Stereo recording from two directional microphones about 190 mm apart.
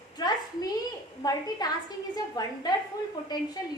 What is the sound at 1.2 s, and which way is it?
A woman's voice, 20° left (ahead or behind).